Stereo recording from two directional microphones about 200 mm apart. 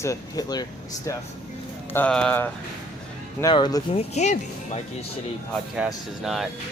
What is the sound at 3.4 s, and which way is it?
Speech, 20° left (ahead or behind).